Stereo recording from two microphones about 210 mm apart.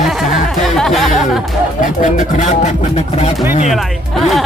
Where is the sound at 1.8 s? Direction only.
40° left (ahead or behind).